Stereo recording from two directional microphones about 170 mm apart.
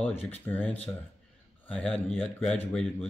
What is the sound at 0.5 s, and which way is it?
Speech, 15° left (ahead or behind).